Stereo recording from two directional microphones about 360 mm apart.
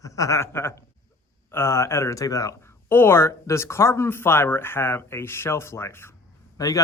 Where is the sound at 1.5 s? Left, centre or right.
Centre.